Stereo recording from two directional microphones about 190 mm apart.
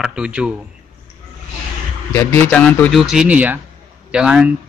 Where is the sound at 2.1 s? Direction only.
10° left (ahead or behind).